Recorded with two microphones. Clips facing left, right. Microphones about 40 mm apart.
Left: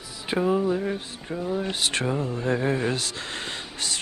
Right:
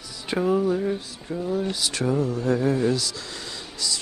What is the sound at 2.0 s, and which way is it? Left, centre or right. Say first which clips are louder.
Speech: right 3 dB; left.